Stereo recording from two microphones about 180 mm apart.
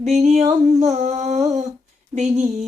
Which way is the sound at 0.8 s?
40° right (ahead or behind).